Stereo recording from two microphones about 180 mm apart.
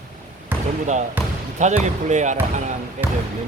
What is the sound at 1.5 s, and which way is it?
Speech, 40° right (ahead or behind).